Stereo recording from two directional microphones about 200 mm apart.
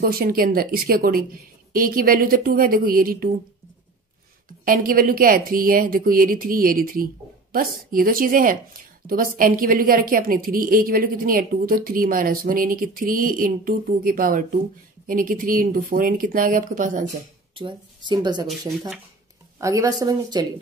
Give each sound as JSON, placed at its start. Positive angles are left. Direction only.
{"t": 0.0, "sound": "a woman's voice", "side_deg": -50}
{"t": 4.6, "sound": "a woman's voice", "side_deg": -45}
{"t": 17.6, "sound": "speech", "side_deg": -25}
{"t": 19.6, "sound": "a woman's voice", "side_deg": -15}